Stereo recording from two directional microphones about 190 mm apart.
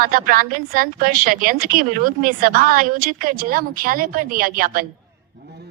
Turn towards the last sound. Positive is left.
turn(degrees=-50)  # may be behind; listen again after turning